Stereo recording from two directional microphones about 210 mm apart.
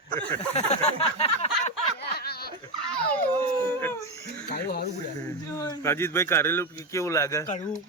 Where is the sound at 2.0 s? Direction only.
50° left (ahead or behind).